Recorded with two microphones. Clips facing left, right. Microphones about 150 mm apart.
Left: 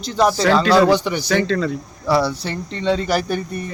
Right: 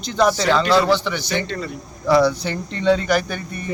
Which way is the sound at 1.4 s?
90° left.